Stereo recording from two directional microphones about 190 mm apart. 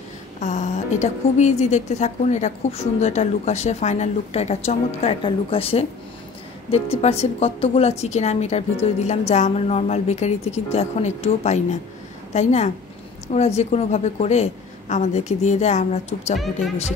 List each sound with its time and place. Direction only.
0.4 s a woman's voice: 40° left (ahead or behind)